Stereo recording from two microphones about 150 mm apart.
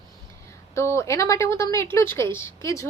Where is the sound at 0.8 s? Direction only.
20° left (ahead or behind).